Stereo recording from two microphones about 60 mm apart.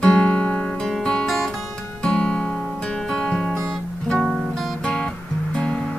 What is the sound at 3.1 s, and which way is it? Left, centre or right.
Music, centre.